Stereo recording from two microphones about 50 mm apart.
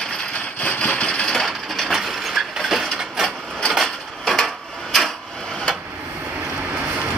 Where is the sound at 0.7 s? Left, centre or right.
Left.